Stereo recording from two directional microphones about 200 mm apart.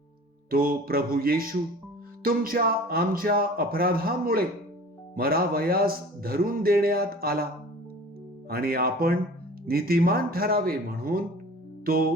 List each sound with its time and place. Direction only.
0.5 s a man's voice: 45° right (ahead or behind)
8.4 s a man's voice: 50° right (ahead or behind)